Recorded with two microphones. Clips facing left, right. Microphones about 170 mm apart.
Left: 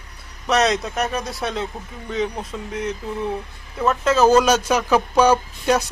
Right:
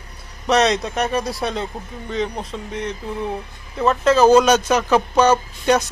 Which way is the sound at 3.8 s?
5° left (ahead or behind).